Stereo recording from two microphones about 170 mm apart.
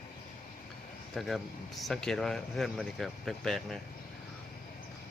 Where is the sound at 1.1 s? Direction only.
Centre (ahead or behind).